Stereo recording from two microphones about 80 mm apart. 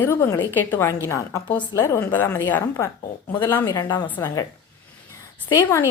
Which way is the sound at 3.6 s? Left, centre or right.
Left.